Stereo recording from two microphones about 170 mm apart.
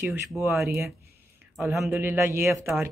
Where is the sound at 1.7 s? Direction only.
15° right (ahead or behind).